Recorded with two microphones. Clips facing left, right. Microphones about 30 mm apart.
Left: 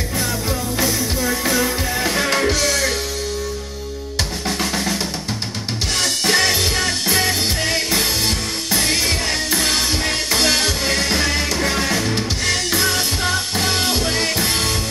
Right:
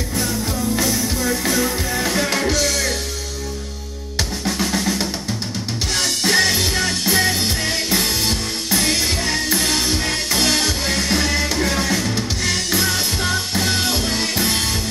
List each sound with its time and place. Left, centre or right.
0.7 s music: centre
4.5 s drum: centre
6.2 s music: centre